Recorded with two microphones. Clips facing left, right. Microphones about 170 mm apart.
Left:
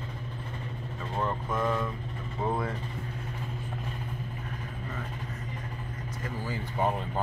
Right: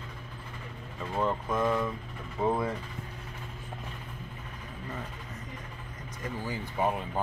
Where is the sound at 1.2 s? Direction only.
10° right (ahead or behind).